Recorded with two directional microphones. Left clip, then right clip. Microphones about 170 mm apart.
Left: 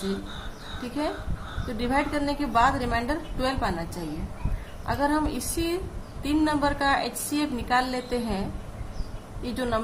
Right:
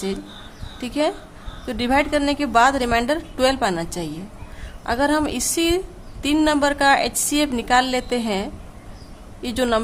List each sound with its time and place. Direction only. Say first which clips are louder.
0.8 s a woman's voice: right 8 dB; 50° right (ahead or behind)